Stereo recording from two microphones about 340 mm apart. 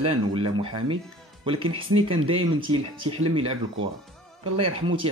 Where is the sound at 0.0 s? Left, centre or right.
Centre.